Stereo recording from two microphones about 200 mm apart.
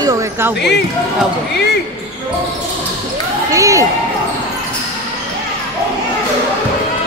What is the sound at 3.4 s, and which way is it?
Basketball bounce, 15° right (ahead or behind).